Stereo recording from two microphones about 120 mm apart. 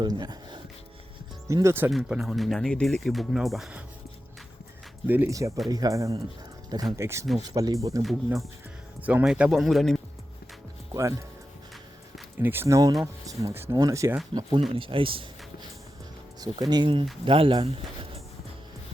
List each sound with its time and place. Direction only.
0.0 s speech: 35° right (ahead or behind)
1.5 s speech: 25° right (ahead or behind)
1.9 s speech: 5° right (ahead or behind)
5.0 s speech: 15° right (ahead or behind)
5.3 s speech: 25° right (ahead or behind)
9.0 s speech: 15° right (ahead or behind)
12.4 s speech: 20° right (ahead or behind)
14.8 s speech: 50° right (ahead or behind)
16.4 s speech: 35° right (ahead or behind)